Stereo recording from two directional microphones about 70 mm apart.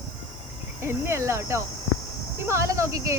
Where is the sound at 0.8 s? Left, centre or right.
Right.